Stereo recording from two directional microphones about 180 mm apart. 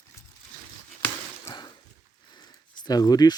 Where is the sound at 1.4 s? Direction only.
25° left (ahead or behind).